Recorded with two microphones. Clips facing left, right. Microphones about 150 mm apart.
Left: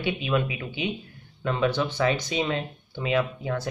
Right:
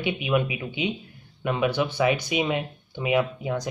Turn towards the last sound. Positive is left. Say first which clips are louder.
# right 1 dB
turn(degrees=-15)  # may be behind; listen again after turning